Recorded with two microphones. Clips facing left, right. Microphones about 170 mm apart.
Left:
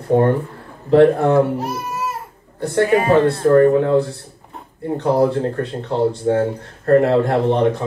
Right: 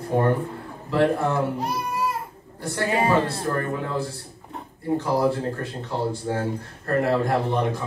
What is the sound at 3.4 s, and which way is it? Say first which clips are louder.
Speech: left 14 dB; 60° left (ahead or behind).